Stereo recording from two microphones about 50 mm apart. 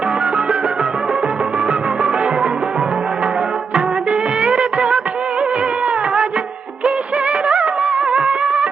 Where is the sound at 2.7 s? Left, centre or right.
Centre.